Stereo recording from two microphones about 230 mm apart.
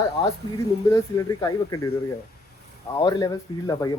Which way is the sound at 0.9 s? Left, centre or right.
Centre.